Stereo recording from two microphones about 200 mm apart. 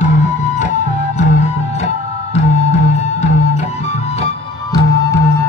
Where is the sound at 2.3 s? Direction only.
35° left (ahead or behind).